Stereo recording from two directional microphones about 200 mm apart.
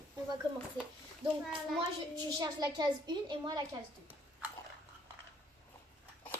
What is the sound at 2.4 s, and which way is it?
A woman's voice, 20° right (ahead or behind).